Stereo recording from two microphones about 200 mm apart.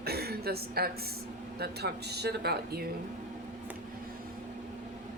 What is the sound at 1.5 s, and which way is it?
Speech, 55° right (ahead or behind).